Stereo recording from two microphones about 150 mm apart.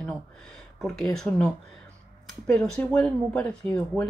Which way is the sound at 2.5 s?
5° left (ahead or behind).